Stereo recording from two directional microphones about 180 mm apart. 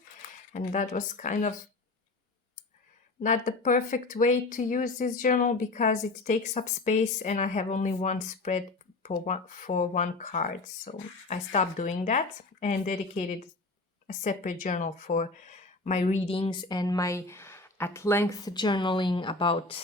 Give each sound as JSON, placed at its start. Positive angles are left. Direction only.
{"t": 0.5, "sound": "speech", "side_deg": 45}
{"t": 3.2, "sound": "speech", "side_deg": 45}